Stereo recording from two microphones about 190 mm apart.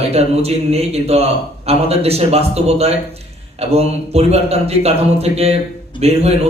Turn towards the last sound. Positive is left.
turn(degrees=-35)  # may be behind; listen again after turning